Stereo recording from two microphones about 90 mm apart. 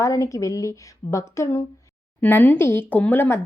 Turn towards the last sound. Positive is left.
turn(degrees=25)  # may be behind; listen again after turning